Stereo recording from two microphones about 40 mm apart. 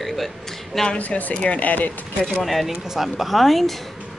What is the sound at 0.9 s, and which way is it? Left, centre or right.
Speech, left.